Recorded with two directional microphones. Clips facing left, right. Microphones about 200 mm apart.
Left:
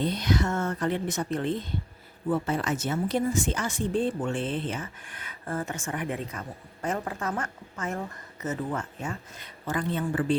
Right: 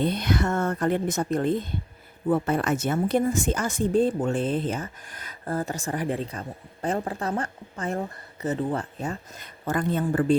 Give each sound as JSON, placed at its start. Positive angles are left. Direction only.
{"t": 0.0, "sound": "a woman's voice", "side_deg": -60}
{"t": 2.3, "sound": "speech", "side_deg": -55}